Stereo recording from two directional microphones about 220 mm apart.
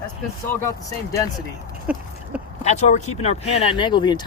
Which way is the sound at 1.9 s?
5° right (ahead or behind).